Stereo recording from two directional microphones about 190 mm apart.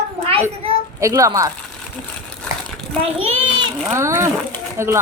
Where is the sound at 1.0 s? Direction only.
15° right (ahead or behind).